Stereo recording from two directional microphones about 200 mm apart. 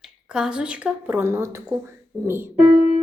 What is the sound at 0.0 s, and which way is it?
Speech, 5° right (ahead or behind).